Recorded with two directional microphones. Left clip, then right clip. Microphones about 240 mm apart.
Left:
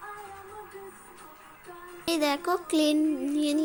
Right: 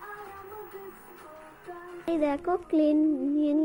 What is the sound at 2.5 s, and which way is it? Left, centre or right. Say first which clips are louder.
Child singing: right 1 dB; centre.